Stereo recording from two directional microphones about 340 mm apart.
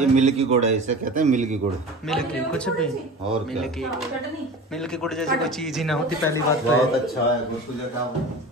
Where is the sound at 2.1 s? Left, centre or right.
Centre.